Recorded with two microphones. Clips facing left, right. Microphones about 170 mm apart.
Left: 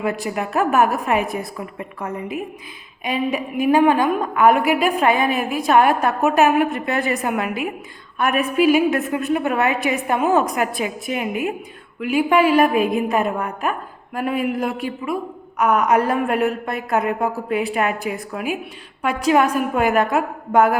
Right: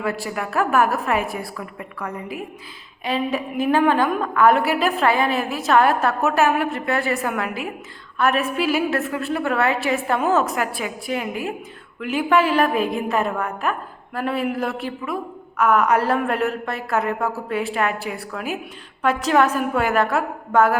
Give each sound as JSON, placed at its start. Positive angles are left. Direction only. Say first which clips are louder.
{"t": 0.0, "sound": "a woman's voice", "louder": "left 2 dB", "side_deg": 20}